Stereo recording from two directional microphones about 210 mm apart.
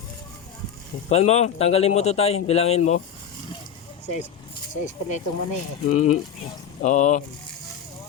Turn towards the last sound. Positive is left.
turn(degrees=35)  # may be behind; listen again after turning